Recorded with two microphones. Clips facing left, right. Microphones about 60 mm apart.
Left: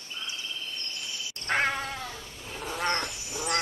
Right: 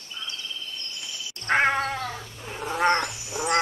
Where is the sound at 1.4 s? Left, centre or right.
Right.